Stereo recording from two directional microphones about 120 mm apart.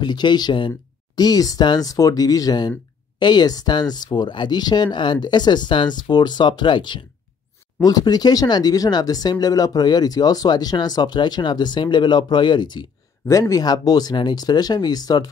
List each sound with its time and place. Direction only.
0.0 s speech: 40° left (ahead or behind)